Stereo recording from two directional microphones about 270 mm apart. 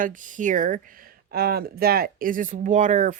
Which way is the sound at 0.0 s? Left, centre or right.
Right.